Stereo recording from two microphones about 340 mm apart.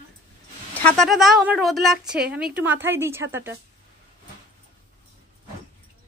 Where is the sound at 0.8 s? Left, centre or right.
Centre.